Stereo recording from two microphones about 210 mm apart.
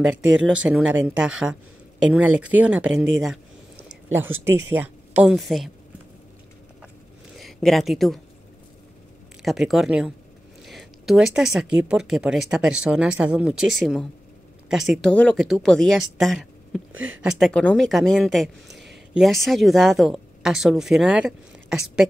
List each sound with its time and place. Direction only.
0.2 s speech: 65° right (ahead or behind)
0.5 s a woman's voice: 5° right (ahead or behind)
4.1 s a woman's voice: 10° right (ahead or behind)
7.3 s speech: centre (ahead or behind)
9.4 s a woman's voice: centre (ahead or behind)
10.6 s a sound: centre (ahead or behind)
11.9 s a woman's voice: 5° right (ahead or behind)